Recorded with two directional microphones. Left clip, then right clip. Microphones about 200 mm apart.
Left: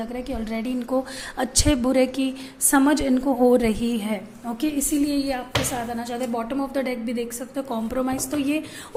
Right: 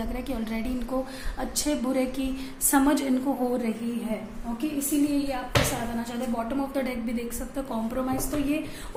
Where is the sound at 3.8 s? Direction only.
45° left (ahead or behind).